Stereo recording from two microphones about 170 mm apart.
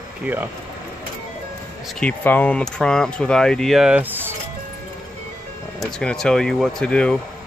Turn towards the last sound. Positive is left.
turn(degrees=5)  # may be behind; listen again after turning